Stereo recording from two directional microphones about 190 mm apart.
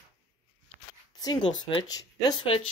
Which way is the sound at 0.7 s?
35° right (ahead or behind).